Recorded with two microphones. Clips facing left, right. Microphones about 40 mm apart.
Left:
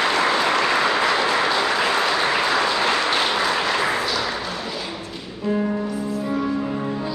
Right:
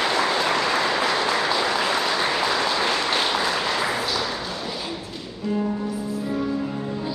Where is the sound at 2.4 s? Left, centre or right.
Centre.